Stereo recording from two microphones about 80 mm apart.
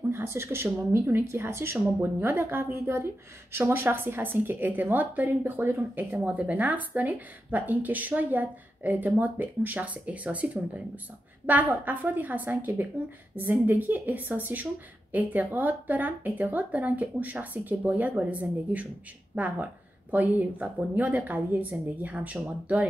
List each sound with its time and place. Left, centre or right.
0.2 s a woman's voice: right